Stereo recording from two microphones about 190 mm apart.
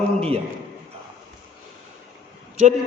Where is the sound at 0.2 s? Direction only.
30° right (ahead or behind).